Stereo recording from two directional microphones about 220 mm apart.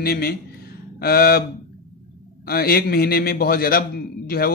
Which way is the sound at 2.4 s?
45° left (ahead or behind).